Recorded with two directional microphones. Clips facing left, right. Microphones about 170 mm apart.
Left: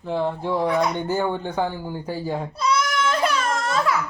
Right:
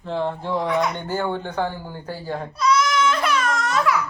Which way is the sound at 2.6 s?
35° left (ahead or behind).